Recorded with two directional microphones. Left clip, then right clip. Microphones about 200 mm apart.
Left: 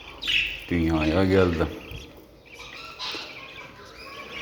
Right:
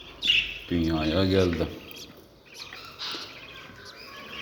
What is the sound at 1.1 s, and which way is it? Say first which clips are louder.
Speech: left 3 dB; 15° right (ahead or behind).